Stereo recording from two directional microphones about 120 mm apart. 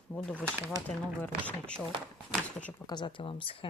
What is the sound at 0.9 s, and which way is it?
Speech, 15° left (ahead or behind).